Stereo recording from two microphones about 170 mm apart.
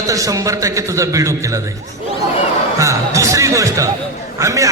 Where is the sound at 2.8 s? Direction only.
20° right (ahead or behind).